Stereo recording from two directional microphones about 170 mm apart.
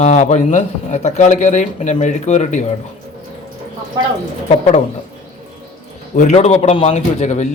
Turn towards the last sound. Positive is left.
turn(degrees=45)  # may be behind; listen again after turning